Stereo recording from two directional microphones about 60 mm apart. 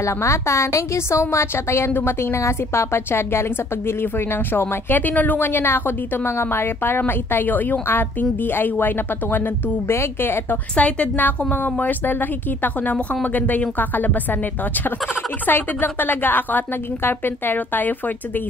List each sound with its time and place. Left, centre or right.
0.0 s a woman's voice: left
9.8 s a woman's voice: left
10.8 s a woman's voice: left
15.4 s a woman's voice: left